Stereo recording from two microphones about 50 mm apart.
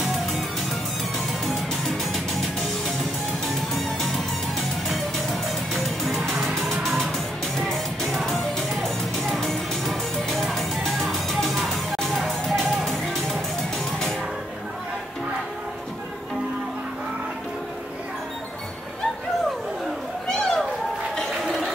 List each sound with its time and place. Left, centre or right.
1.4 s music: centre
20.2 s a sound: centre
21.2 s music: centre